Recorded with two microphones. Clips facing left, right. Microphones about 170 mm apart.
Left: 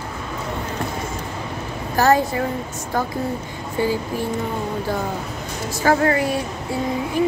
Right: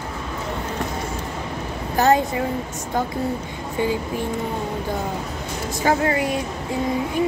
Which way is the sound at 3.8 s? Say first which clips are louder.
Left 1 dB; 20° right (ahead or behind).